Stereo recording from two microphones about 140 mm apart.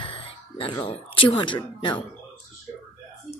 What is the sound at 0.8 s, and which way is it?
Speech, 40° left (ahead or behind).